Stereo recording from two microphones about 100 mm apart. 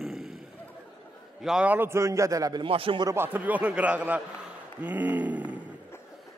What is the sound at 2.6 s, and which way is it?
Speech, 65° right (ahead or behind).